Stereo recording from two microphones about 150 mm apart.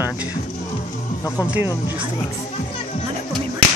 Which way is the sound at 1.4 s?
10° right (ahead or behind).